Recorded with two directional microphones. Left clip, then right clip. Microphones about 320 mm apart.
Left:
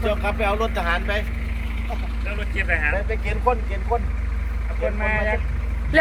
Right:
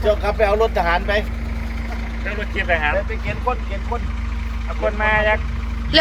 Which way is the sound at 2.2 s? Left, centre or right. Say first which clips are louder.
Right 4 dB; right.